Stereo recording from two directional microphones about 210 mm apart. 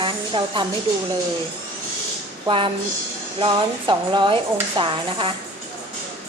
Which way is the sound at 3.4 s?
20° right (ahead or behind).